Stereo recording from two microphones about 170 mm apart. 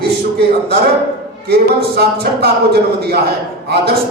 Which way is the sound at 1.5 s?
70° right (ahead or behind).